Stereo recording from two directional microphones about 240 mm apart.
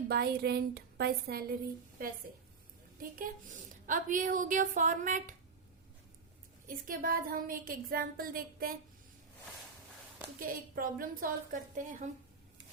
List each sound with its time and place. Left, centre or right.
0.1 s a woman's voice: right
3.0 s a woman's voice: right
6.7 s a woman's voice: right
10.8 s a woman's voice: right